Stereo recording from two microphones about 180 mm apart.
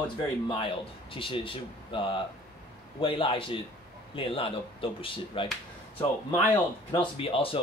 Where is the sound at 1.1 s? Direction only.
30° left (ahead or behind).